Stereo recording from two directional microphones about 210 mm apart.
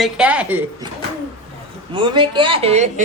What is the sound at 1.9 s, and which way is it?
A woman's voice, 25° right (ahead or behind).